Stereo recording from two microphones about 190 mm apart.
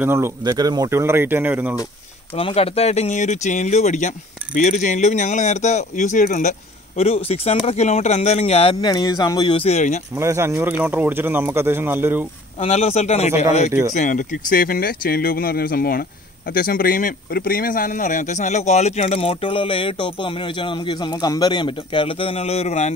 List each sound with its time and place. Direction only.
0.0 s speech: 10° right (ahead or behind)
2.3 s speech: 30° left (ahead or behind)
7.0 s speech: 30° left (ahead or behind)
8.8 s speech: 20° left (ahead or behind); by 10.0 s 40° left (ahead or behind)
10.1 s speech: 15° right (ahead or behind)
12.5 s speech: 35° left (ahead or behind)